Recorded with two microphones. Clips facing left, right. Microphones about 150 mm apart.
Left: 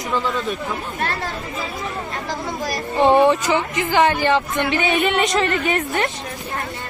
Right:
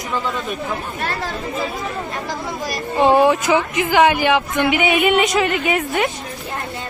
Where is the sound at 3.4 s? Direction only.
15° right (ahead or behind).